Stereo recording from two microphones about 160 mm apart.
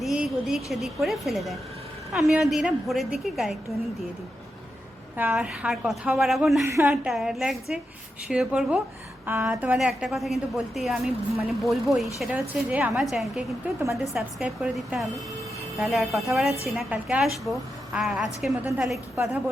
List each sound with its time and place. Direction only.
0.0 s a woman's voice: centre (ahead or behind)
5.1 s a woman's voice: 10° right (ahead or behind)
6.7 s a woman's voice: 15° right (ahead or behind)